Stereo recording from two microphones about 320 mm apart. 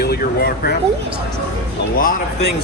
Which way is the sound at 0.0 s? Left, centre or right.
Left.